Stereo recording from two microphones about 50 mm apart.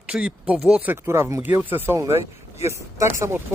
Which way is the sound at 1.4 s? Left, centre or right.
Right.